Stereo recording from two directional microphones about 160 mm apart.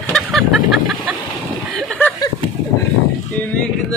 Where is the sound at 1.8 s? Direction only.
5° left (ahead or behind).